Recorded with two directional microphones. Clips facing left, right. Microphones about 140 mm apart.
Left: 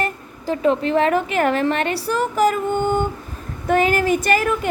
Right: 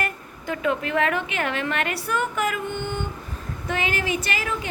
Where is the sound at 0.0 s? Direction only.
30° left (ahead or behind).